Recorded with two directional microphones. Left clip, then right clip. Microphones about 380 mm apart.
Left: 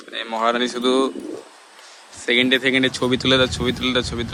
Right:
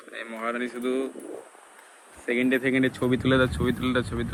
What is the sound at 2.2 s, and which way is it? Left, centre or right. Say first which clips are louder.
Speech: left 7 dB; centre.